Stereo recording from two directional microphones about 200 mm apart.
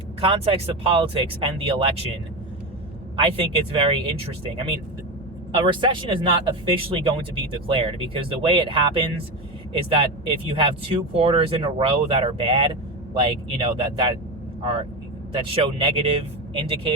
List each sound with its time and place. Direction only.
0.2 s speech: 30° right (ahead or behind)
3.2 s speech: 25° right (ahead or behind)
5.5 s speech: 25° right (ahead or behind)